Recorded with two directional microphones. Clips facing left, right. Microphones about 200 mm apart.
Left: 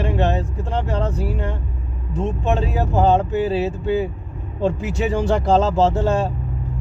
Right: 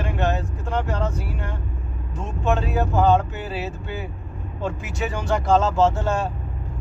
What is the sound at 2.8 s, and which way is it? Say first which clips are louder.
Speech: left 1 dB; 30° left (ahead or behind).